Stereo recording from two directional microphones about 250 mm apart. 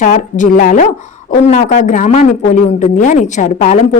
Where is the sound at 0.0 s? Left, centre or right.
Left.